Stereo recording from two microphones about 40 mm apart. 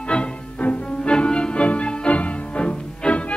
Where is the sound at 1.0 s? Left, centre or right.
Left.